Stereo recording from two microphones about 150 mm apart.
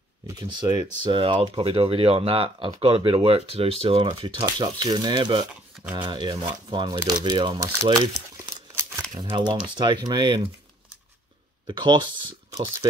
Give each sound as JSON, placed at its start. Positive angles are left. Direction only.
{"t": 0.3, "sound": "speech", "side_deg": -30}
{"t": 7.6, "sound": "speech", "side_deg": -20}
{"t": 9.2, "sound": "speech", "side_deg": -30}
{"t": 11.6, "sound": "speech", "side_deg": -30}